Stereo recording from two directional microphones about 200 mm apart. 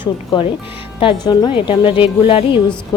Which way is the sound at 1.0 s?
20° left (ahead or behind).